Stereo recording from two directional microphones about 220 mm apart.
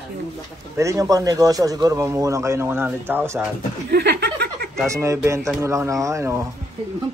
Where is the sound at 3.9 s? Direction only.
50° right (ahead or behind).